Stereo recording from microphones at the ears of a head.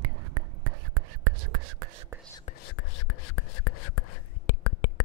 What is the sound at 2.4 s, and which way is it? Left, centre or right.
Whispering, left.